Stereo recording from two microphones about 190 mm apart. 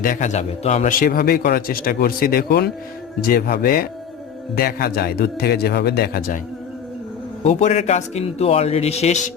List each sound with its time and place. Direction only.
0.0 s a man's voice: 40° left (ahead or behind)
7.4 s a man's voice: 35° left (ahead or behind)